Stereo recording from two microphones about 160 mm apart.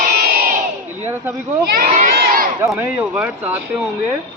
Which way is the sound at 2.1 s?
70° right (ahead or behind).